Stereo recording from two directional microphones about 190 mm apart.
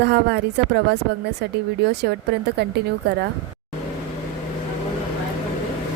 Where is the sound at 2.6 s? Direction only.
60° right (ahead or behind).